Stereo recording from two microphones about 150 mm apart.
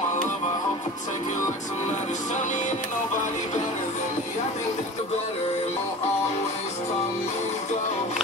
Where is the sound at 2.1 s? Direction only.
55° left (ahead or behind).